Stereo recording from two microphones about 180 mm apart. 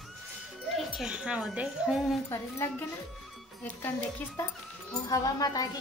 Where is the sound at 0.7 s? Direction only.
Centre (ahead or behind).